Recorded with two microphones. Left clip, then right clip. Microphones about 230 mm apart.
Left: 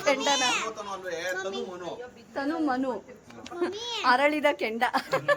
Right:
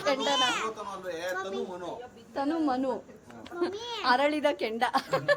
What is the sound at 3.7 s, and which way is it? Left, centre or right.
Speech, centre.